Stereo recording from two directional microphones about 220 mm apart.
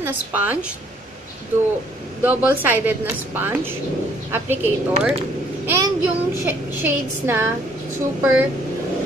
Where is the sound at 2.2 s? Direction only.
10° right (ahead or behind).